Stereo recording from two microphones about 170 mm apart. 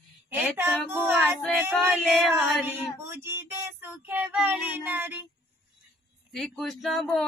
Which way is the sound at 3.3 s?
15° right (ahead or behind).